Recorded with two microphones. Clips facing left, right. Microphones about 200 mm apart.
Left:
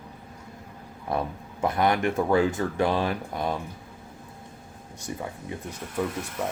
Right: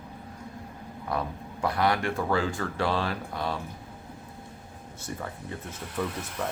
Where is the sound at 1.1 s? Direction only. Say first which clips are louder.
Left 3 dB; 25° left (ahead or behind).